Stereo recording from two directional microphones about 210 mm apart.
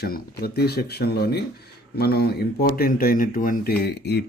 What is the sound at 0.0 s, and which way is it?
Speech, 50° left (ahead or behind).